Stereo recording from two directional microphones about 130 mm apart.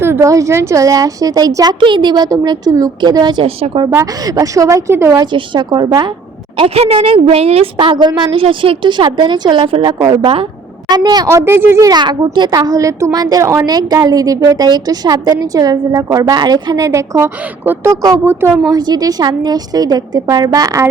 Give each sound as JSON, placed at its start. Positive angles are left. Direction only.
{"t": 0.0, "sound": "a woman's voice", "side_deg": -20}
{"t": 3.4, "sound": "a woman's voice", "side_deg": -45}
{"t": 3.8, "sound": "a woman's voice", "side_deg": -25}
{"t": 5.2, "sound": "a woman's voice", "side_deg": -35}
{"t": 6.6, "sound": "a woman's voice", "side_deg": -50}
{"t": 18.7, "sound": "a woman's voice", "side_deg": -30}